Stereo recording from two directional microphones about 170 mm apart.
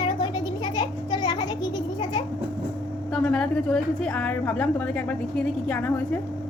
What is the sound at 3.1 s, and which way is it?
A woman's voice, 5° left (ahead or behind).